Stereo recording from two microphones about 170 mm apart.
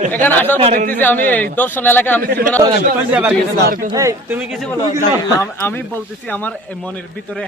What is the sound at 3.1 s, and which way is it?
Speech, 10° right (ahead or behind).